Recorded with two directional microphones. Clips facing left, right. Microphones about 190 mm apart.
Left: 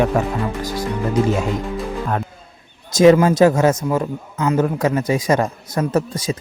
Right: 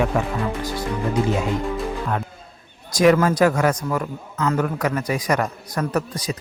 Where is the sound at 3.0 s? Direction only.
25° left (ahead or behind).